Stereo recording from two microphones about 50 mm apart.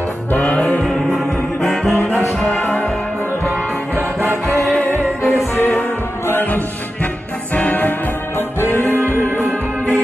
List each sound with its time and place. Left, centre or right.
0.3 s music: left
1.6 s music: centre
4.5 s music: left
8.4 s music: left